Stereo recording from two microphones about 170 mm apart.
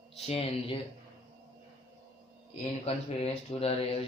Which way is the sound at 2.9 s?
35° left (ahead or behind).